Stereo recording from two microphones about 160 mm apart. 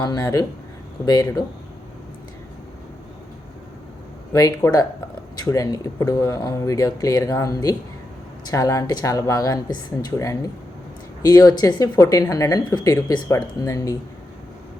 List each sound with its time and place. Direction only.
0.0 s speech: 25° left (ahead or behind)
4.3 s speech: 20° left (ahead or behind)